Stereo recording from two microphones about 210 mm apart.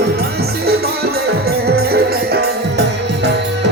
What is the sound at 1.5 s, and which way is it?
Music, 50° right (ahead or behind).